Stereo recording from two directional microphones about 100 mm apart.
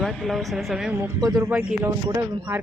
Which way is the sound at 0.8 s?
20° right (ahead or behind).